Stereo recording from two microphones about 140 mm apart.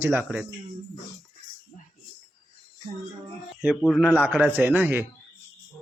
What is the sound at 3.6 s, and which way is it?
Speech, 5° left (ahead or behind).